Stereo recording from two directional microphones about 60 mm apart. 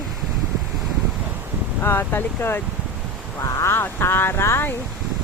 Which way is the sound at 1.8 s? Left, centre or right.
Left.